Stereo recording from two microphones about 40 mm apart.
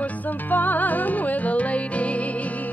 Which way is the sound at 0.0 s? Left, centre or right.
Left.